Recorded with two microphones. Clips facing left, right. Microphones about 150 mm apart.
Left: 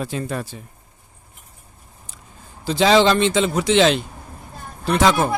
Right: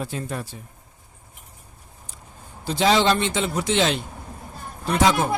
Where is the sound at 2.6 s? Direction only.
90° left.